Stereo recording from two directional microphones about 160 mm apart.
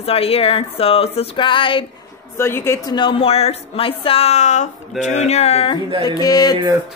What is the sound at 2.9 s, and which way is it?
Speech, 35° left (ahead or behind).